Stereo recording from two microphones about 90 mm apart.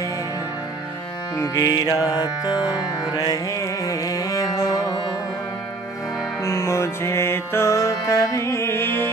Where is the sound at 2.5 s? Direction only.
10° right (ahead or behind).